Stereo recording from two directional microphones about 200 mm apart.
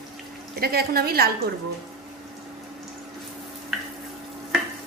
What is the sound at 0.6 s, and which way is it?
Speech, 50° right (ahead or behind).